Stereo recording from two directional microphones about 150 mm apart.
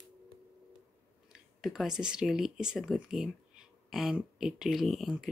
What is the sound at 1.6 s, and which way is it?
Speech, centre (ahead or behind).